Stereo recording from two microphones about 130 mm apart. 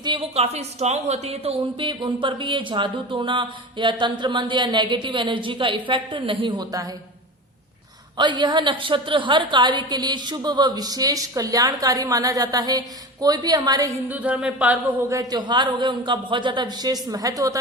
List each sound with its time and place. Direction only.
0.0 s a sound: 35° right (ahead or behind)
0.3 s speech: 55° right (ahead or behind)
1.9 s speech: 40° right (ahead or behind)
8.2 s speech: 35° right (ahead or behind)
14.1 s speech: 10° right (ahead or behind)
15.1 s speech: 30° right (ahead or behind)